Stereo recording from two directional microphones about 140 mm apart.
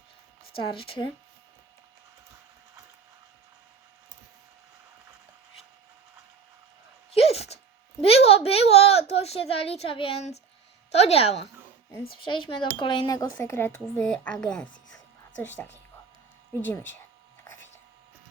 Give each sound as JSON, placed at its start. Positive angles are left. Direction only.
{"t": 0.5, "sound": "speech", "side_deg": 40}
{"t": 7.1, "sound": "a sound", "side_deg": 45}
{"t": 10.9, "sound": "a woman's voice", "side_deg": 45}
{"t": 13.4, "sound": "a woman's voice", "side_deg": 20}